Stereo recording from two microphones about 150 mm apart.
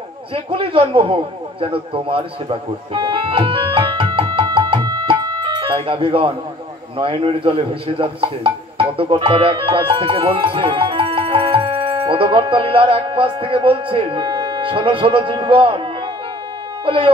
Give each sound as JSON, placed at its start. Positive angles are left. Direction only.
{"t": 0.3, "sound": "a man's voice", "side_deg": -35}
{"t": 16.8, "sound": "speech", "side_deg": -35}